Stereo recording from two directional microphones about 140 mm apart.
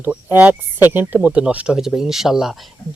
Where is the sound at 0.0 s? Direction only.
15° right (ahead or behind).